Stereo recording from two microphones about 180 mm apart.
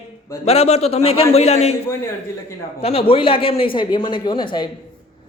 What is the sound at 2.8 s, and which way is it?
A man's voice, 30° left (ahead or behind).